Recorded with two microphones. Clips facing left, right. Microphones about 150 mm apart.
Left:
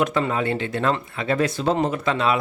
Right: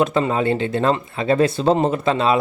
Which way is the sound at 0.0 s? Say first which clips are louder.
Right 4 dB; 25° right (ahead or behind).